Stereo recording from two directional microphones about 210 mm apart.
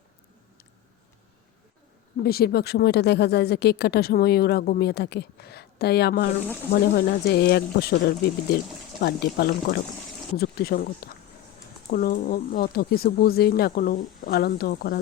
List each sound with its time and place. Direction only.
2.2 s speech: 45° left (ahead or behind)